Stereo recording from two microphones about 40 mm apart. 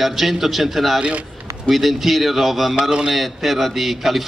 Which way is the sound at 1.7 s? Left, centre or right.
Centre.